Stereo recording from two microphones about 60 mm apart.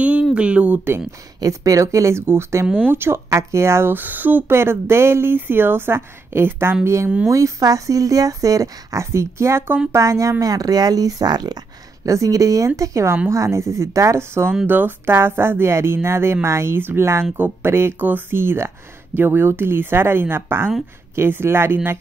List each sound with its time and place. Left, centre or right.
0.0 s a sound: centre
1.4 s speech: right
2.2 s a woman's voice: right
4.6 s a woman's voice: right
7.2 s speech: right
9.0 s speech: right
9.9 s speech: right
10.4 s speech: right
14.7 s a woman's voice: right